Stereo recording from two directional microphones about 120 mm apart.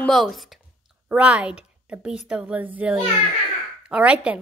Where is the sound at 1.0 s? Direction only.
10° right (ahead or behind).